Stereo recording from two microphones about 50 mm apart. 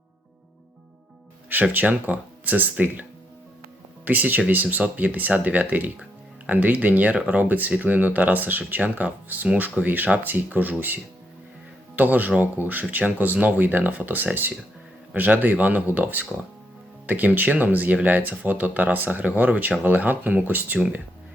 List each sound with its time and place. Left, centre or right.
1.7 s speech: right